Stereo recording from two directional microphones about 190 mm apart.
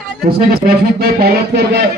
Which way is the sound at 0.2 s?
55° right (ahead or behind).